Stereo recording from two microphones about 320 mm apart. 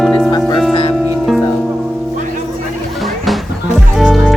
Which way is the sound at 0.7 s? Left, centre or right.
Centre.